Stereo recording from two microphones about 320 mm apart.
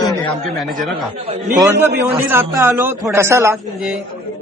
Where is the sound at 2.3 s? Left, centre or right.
Centre.